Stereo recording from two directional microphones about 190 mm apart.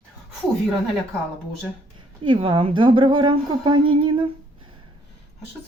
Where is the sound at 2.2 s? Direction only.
25° right (ahead or behind).